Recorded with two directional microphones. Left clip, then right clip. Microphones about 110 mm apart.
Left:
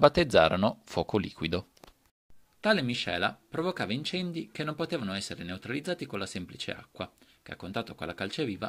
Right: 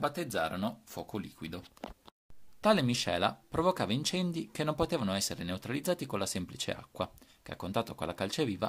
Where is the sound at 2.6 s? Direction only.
15° right (ahead or behind).